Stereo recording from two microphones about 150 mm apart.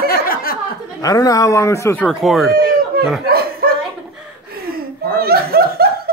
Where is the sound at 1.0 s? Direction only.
25° left (ahead or behind).